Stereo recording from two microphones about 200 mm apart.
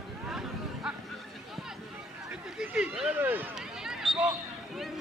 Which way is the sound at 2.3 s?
5° right (ahead or behind).